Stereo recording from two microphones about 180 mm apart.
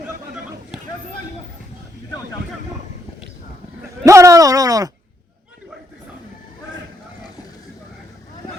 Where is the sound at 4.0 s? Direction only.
15° right (ahead or behind).